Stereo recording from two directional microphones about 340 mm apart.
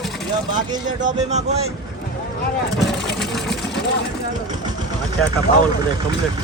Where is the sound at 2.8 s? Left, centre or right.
Centre.